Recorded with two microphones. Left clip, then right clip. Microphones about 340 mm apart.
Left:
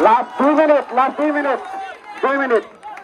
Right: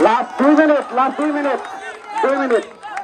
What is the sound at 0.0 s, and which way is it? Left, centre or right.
Run, centre.